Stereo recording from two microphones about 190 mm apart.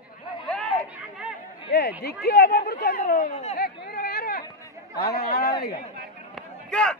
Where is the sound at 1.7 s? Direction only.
60° left (ahead or behind).